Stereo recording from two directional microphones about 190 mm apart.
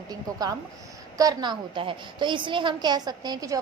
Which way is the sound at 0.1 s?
20° right (ahead or behind).